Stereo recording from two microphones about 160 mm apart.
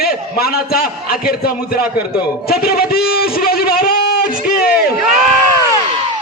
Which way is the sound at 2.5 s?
70° left (ahead or behind).